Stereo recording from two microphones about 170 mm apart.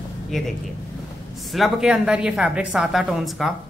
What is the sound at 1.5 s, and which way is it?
A woman's voice, centre (ahead or behind).